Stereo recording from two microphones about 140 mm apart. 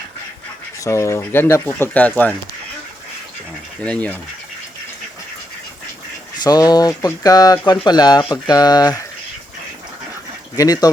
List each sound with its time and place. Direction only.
0.9 s speech: 20° left (ahead or behind)
3.8 s speech: 10° left (ahead or behind)
6.4 s speech: 25° left (ahead or behind)
10.6 s speech: 25° left (ahead or behind)